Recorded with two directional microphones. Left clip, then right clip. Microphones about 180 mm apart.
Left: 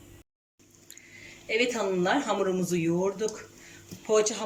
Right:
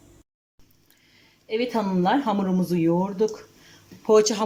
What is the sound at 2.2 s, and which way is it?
Speech, 50° right (ahead or behind).